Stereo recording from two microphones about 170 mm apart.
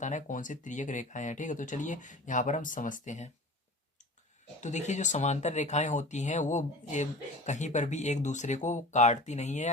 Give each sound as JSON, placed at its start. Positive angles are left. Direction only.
{"t": 0.0, "sound": "speech", "side_deg": 45}
{"t": 4.6, "sound": "speech", "side_deg": 45}